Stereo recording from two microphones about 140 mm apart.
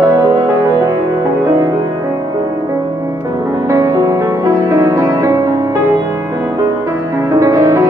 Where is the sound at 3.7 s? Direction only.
25° right (ahead or behind).